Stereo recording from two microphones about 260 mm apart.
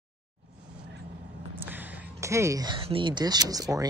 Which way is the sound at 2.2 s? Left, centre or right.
Centre.